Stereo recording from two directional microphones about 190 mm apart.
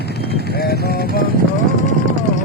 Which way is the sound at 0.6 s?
55° left (ahead or behind).